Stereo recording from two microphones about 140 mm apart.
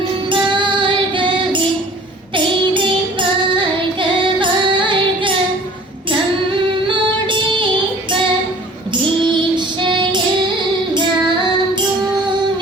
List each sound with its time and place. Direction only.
0.3 s music: 35° right (ahead or behind)
2.3 s child singing: 35° right (ahead or behind)
4.4 s music: 35° right (ahead or behind)
6.8 s music: 35° right (ahead or behind)
9.3 s child singing: 35° right (ahead or behind)